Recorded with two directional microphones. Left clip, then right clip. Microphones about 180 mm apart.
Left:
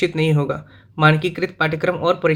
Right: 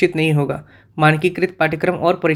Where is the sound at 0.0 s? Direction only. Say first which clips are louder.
Right 3 dB; 30° right (ahead or behind).